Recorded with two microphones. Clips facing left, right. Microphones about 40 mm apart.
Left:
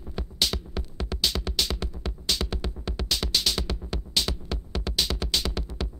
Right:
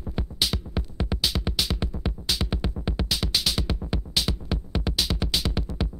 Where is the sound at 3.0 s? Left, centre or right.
Centre.